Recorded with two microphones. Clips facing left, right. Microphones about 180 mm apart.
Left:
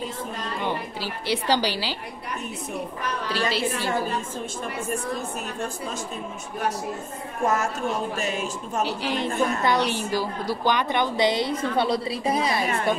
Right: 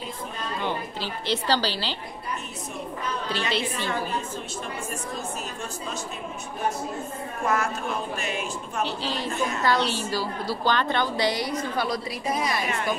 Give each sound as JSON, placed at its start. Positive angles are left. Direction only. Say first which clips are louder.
{"t": 0.6, "sound": "a woman's voice", "louder": "left 1 dB", "side_deg": 10}
{"t": 3.3, "sound": "a woman's voice", "louder": "left 2 dB", "side_deg": 5}
{"t": 7.4, "sound": "speech", "louder": "left 2 dB", "side_deg": 45}
{"t": 8.8, "sound": "a woman's voice", "louder": "left 3 dB", "side_deg": 15}